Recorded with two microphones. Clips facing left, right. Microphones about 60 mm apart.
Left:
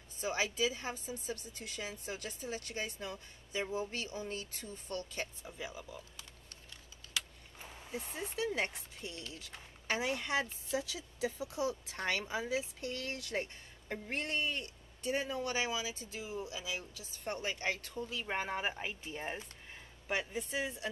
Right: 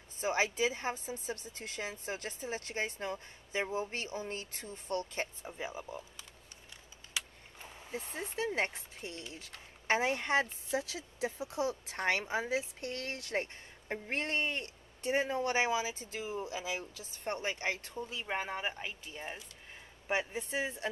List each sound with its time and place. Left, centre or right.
0.2 s a woman's voice: right
7.2 s a sound: centre
7.9 s a woman's voice: right
18.2 s speech: centre
20.1 s speech: right